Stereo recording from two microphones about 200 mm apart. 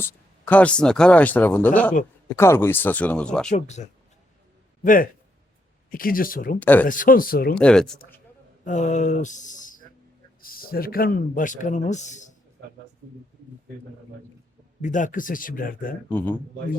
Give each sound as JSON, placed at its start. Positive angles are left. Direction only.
{"t": 0.0, "sound": "speech", "side_deg": 10}
{"t": 3.5, "sound": "a man's voice", "side_deg": 35}
{"t": 6.6, "sound": "speech", "side_deg": 10}
{"t": 6.8, "sound": "speech", "side_deg": 40}
{"t": 7.5, "sound": "speech", "side_deg": 5}
{"t": 8.6, "sound": "a man's voice", "side_deg": 35}
{"t": 14.8, "sound": "speech", "side_deg": 40}
{"t": 16.0, "sound": "speech", "side_deg": 10}